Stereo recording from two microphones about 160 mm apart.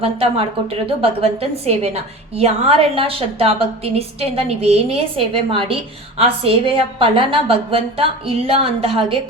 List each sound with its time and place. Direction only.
0.0 s a woman's voice: 35° right (ahead or behind)